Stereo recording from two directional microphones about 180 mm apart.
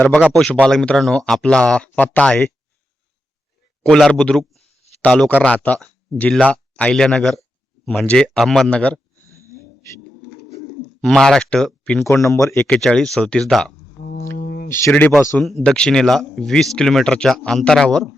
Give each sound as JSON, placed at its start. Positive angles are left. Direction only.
{"t": 0.1, "sound": "speech", "side_deg": 0}
{"t": 3.8, "sound": "speech", "side_deg": 5}
{"t": 11.0, "sound": "speech", "side_deg": 5}
{"t": 12.5, "sound": "speech", "side_deg": 5}
{"t": 14.0, "sound": "a sound", "side_deg": 55}
{"t": 14.3, "sound": "speech", "side_deg": 45}
{"t": 14.7, "sound": "speech", "side_deg": 10}